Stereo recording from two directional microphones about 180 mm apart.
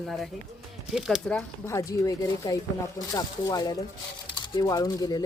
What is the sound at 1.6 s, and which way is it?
Speech, 15° left (ahead or behind).